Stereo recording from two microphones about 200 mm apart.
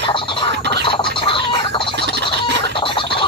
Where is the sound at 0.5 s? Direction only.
60° right (ahead or behind).